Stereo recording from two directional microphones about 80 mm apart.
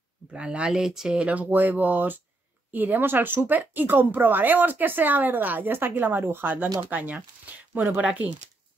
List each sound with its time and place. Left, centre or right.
0.3 s speech: centre